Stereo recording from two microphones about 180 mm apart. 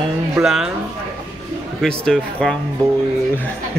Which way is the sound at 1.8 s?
5° left (ahead or behind).